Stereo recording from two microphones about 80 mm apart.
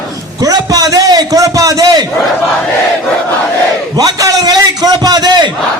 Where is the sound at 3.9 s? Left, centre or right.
Right.